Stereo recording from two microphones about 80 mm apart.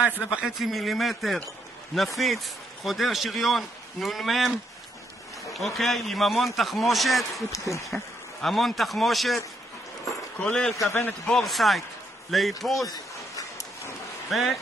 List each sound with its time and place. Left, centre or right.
0.3 s speech: centre
5.5 s speech: centre
7.5 s speech: left
7.9 s speech: centre
10.4 s speech: centre
10.9 s a man's voice: left
11.2 s speech: centre
12.9 s a sound: left
14.3 s speech: centre